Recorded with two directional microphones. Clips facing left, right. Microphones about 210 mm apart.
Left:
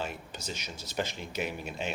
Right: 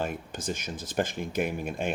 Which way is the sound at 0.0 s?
50° right (ahead or behind).